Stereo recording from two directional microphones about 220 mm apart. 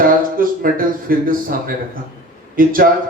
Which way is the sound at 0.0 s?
40° right (ahead or behind).